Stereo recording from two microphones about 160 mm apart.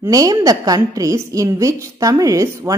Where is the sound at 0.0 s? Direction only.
20° right (ahead or behind).